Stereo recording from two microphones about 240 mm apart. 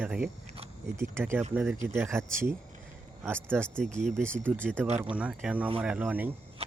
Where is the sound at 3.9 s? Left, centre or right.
Right.